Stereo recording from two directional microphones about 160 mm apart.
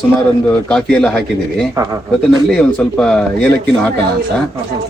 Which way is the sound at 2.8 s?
10° left (ahead or behind).